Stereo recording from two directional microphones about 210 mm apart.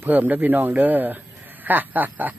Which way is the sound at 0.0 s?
10° right (ahead or behind).